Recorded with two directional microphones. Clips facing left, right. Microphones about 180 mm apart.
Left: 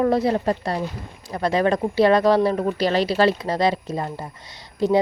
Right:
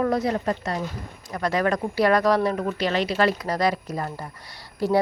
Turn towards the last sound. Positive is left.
turn(degrees=20)  # may be behind; listen again after turning